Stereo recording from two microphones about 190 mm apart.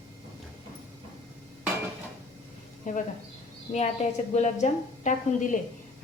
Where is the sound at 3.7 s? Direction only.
25° left (ahead or behind).